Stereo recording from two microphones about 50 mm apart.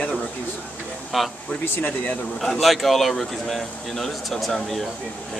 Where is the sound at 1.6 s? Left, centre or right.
Left.